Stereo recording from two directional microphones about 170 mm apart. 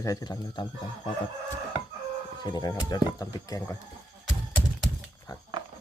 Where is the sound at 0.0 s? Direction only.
20° left (ahead or behind).